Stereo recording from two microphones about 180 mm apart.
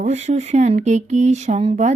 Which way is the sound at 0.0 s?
40° right (ahead or behind).